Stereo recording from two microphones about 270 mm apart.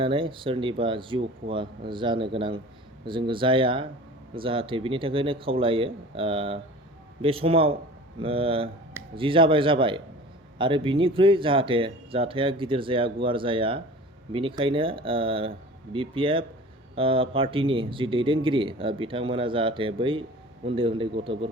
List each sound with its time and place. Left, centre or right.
0.0 s speech: centre